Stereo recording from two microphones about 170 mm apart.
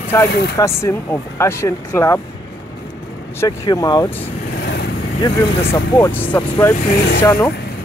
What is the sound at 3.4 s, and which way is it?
Speech, 20° left (ahead or behind).